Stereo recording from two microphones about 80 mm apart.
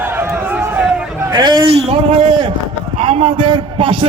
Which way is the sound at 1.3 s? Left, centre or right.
Right.